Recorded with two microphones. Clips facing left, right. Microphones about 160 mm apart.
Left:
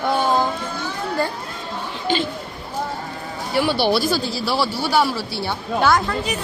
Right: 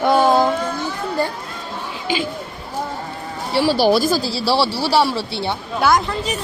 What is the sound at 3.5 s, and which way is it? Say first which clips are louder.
Speech: right 3 dB; 35° right (ahead or behind).